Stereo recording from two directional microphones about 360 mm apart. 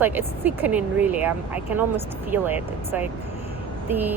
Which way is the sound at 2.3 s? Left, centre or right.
Centre.